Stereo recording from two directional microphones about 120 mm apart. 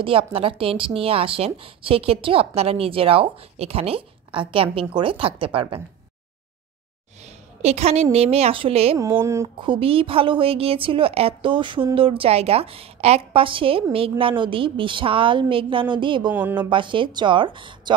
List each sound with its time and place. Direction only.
0.0 s a woman's voice: 50° right (ahead or behind)
7.2 s a woman's voice: 65° right (ahead or behind)
8.9 s speech: 20° right (ahead or behind)
9.6 s a woman's voice: 45° right (ahead or behind)
16.3 s speech: 15° right (ahead or behind)
16.5 s a woman's voice: 40° right (ahead or behind)